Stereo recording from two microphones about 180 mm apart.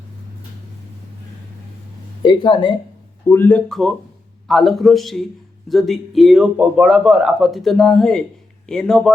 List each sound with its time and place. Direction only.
2.2 s speech: 25° left (ahead or behind)
3.2 s a man's voice: 10° left (ahead or behind)